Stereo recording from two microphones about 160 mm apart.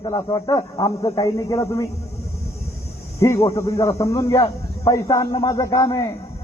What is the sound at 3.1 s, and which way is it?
A man's voice, 20° left (ahead or behind).